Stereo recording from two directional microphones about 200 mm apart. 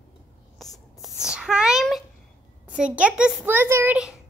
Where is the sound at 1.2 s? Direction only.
5° right (ahead or behind).